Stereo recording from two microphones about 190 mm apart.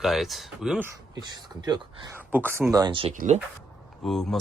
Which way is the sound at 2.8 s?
25° right (ahead or behind).